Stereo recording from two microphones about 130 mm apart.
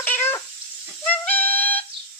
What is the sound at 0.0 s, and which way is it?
Cat, 15° left (ahead or behind).